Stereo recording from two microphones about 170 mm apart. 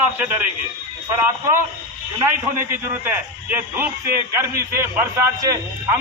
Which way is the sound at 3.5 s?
10° right (ahead or behind).